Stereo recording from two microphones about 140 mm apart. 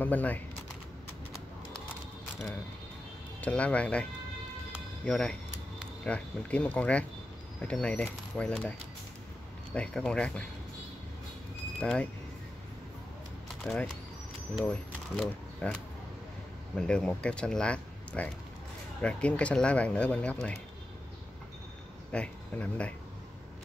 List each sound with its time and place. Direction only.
0.0 s speech: 10° left (ahead or behind)
3.3 s speech: 10° left (ahead or behind)
11.8 s speech: 5° left (ahead or behind)
13.7 s speech: 5° left (ahead or behind)
15.1 s speech: 5° left (ahead or behind)
22.1 s speech: 10° left (ahead or behind)